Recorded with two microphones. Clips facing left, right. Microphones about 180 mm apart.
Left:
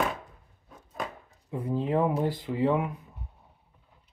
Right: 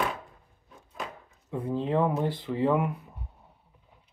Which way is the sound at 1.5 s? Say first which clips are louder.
Even; 5° left (ahead or behind).